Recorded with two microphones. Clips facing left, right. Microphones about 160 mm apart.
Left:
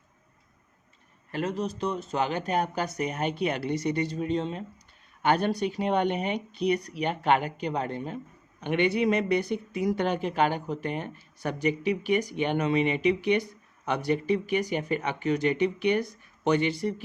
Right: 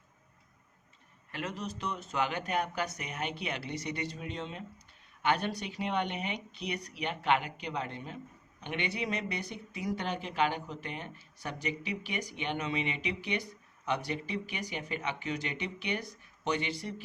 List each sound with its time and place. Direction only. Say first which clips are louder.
1.3 s speech: left 8 dB; 35° left (ahead or behind)